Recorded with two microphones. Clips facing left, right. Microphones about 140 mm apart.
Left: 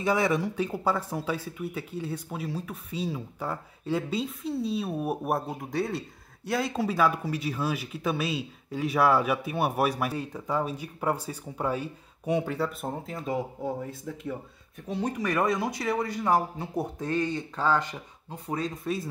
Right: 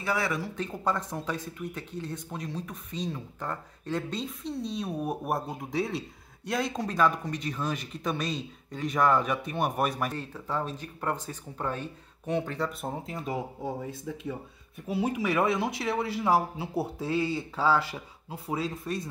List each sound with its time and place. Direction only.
0.0 s speech: 20° left (ahead or behind)
0.6 s speech: 10° left (ahead or behind)
14.9 s speech: 5° right (ahead or behind)